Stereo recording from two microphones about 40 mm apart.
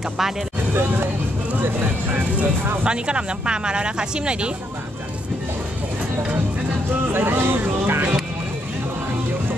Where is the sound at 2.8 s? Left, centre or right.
Right.